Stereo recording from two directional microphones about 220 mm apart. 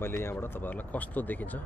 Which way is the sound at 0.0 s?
10° left (ahead or behind).